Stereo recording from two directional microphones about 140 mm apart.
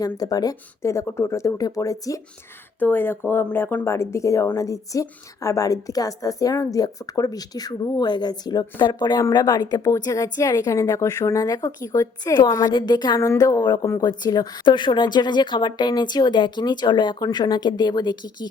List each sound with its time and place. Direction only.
0.0 s speech: 25° left (ahead or behind)